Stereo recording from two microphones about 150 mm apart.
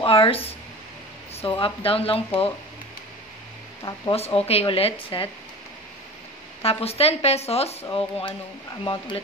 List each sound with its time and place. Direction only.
0.0 s speech: 35° left (ahead or behind)
4.1 s speech: 40° left (ahead or behind)
6.6 s speech: 40° left (ahead or behind)